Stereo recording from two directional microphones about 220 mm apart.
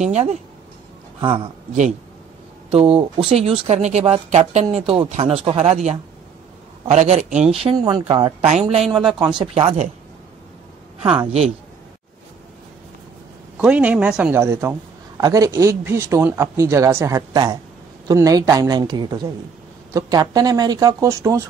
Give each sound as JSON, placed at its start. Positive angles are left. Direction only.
{"t": 0.0, "sound": "a man's voice", "side_deg": -30}
{"t": 7.6, "sound": "speech", "side_deg": -20}
{"t": 13.6, "sound": "a man's voice", "side_deg": -5}